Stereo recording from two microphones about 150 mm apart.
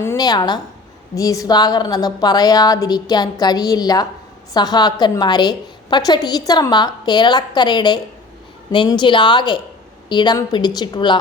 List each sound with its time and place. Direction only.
0.0 s a woman's voice: 15° left (ahead or behind)
0.3 s a woman's voice: 30° left (ahead or behind)